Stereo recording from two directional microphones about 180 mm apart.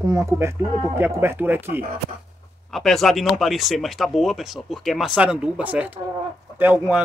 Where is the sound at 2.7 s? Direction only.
Centre (ahead or behind).